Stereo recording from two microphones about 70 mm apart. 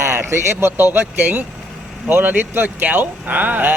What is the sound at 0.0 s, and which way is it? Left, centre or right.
Speech, right.